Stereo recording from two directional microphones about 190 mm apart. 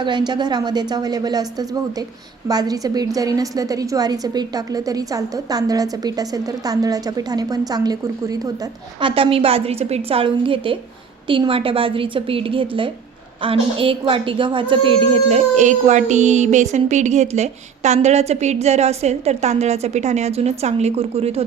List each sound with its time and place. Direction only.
0.0 s a woman's voice: 25° right (ahead or behind)